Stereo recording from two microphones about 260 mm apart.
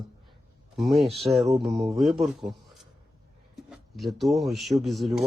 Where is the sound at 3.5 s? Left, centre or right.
Centre.